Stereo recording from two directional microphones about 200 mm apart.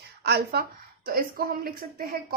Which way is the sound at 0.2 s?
55° right (ahead or behind).